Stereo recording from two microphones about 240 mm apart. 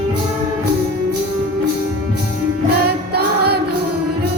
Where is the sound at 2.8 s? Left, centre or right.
Right.